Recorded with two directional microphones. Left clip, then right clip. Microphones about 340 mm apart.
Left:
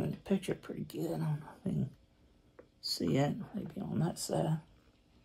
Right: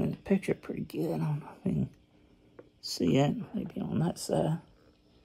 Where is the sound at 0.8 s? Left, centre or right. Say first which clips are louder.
Right 5 dB; right.